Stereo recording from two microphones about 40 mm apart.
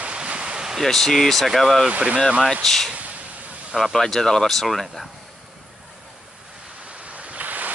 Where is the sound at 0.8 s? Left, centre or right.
Centre.